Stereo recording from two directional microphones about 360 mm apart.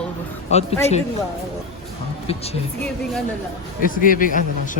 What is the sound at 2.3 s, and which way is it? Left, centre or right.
Speech, centre.